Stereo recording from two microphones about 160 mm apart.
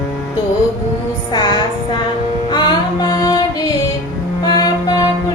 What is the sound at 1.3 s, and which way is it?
Music, 25° left (ahead or behind).